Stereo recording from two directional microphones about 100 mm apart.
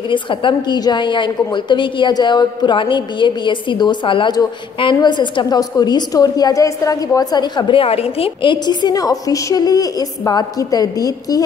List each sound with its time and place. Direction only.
0.1 s a woman's voice: 55° left (ahead or behind); by 11.4 s 40° left (ahead or behind)